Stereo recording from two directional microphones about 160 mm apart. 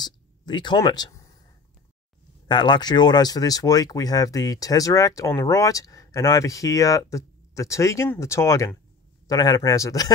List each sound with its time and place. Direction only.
0.0 s speech: 30° left (ahead or behind)
2.4 s speech: 30° left (ahead or behind)